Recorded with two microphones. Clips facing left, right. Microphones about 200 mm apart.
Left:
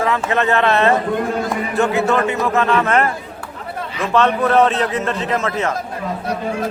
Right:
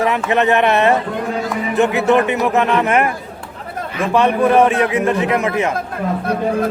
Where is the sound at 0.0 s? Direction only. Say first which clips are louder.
Right 2 dB; 20° right (ahead or behind).